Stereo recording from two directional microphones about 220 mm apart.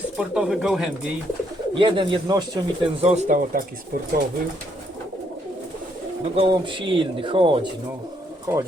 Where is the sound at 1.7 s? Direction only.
20° right (ahead or behind).